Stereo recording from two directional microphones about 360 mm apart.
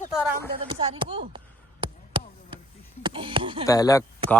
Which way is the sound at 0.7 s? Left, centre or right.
Centre.